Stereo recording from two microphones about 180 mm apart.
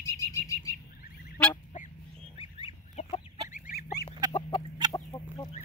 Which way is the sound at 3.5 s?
45° left (ahead or behind).